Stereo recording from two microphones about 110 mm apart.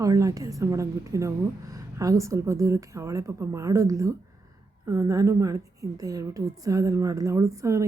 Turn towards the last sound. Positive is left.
turn(degrees=-25)  # may be behind; listen again after turning